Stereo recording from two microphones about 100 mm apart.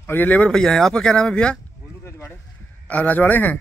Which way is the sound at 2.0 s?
20° left (ahead or behind).